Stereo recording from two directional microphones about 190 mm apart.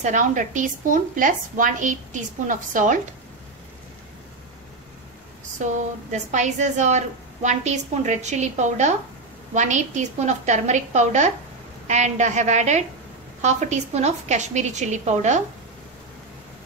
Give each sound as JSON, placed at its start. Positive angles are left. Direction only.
{"t": 0.0, "sound": "a woman's voice", "side_deg": -40}
{"t": 5.6, "sound": "a woman's voice", "side_deg": -40}